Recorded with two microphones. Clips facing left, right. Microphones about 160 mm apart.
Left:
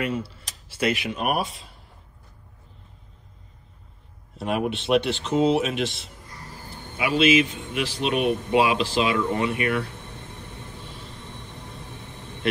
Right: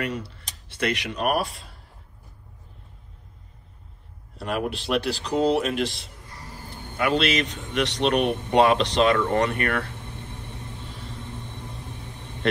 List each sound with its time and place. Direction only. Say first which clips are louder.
0.0 s a man's voice: left 2 dB; 5° left (ahead or behind)
4.4 s a man's voice: left 2 dB; centre (ahead or behind)
7.2 s a man's voice: left 5 dB; 5° left (ahead or behind)
9.1 s speech: right 2 dB; 50° right (ahead or behind)